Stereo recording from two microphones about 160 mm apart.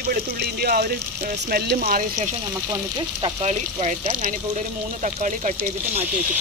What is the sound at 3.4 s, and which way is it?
Speech, 45° right (ahead or behind).